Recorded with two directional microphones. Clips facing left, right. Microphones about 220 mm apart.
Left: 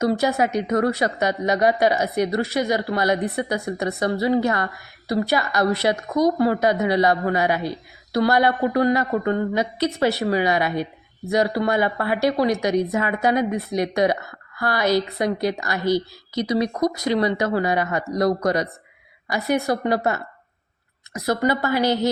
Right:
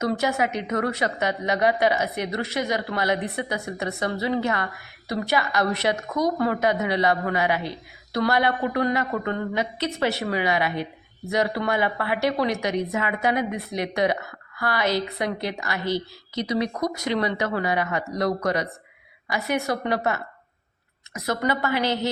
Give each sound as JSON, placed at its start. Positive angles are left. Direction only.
{"t": 0.0, "sound": "a woman's voice", "side_deg": 35}
{"t": 21.1, "sound": "a woman's voice", "side_deg": 35}